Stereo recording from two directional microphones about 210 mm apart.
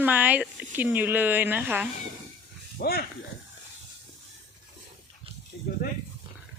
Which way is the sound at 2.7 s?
45° left (ahead or behind).